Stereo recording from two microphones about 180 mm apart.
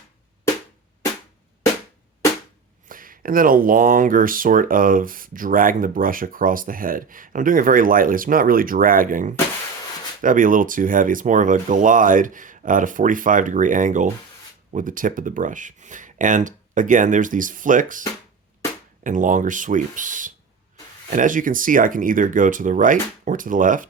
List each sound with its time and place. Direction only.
2.9 s speech: 50° right (ahead or behind)
19.0 s speech: 45° right (ahead or behind)